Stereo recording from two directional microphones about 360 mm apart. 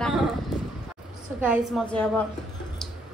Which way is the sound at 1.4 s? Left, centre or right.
Centre.